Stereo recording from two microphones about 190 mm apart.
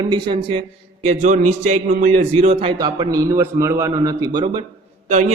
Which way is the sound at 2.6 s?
20° right (ahead or behind).